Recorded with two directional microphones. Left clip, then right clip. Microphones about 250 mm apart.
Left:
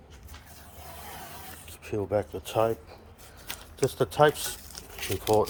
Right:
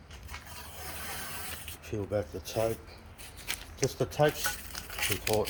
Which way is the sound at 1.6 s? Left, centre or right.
Centre.